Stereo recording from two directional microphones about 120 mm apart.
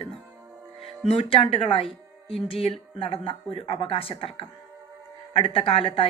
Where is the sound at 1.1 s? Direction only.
50° left (ahead or behind).